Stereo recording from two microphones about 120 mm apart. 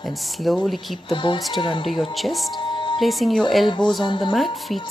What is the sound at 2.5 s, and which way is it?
Music, 40° left (ahead or behind).